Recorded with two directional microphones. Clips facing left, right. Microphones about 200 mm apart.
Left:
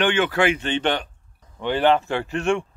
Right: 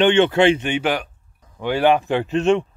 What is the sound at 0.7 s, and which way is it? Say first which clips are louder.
Speech: right 2 dB; 10° right (ahead or behind).